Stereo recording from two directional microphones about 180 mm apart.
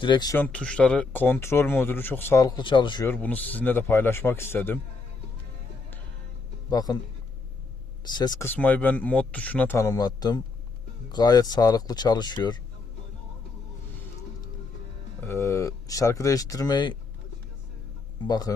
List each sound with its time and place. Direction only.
0.0 s speech: 25° left (ahead or behind)
0.3 s speech: 10° left (ahead or behind); by 3.1 s 25° left (ahead or behind)
3.1 s speech: 10° left (ahead or behind)
6.7 s speech: 20° left (ahead or behind)
8.0 s speech: 20° left (ahead or behind)
8.4 s speech: 10° left (ahead or behind)
15.2 s speech: 15° left (ahead or behind)
18.2 s speech: 20° left (ahead or behind)